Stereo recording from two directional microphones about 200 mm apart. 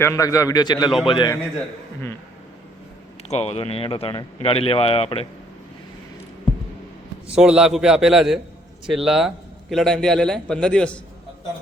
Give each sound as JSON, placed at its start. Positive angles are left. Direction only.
{"t": 0.0, "sound": "a man's voice", "side_deg": 15}
{"t": 3.2, "sound": "speech", "side_deg": 30}
{"t": 7.3, "sound": "a man's voice", "side_deg": -5}